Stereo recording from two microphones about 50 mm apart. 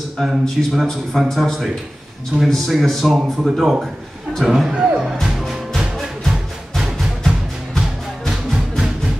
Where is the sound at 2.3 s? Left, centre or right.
Right.